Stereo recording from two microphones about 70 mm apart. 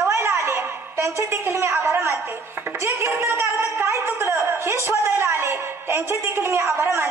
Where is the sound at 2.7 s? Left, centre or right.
Right.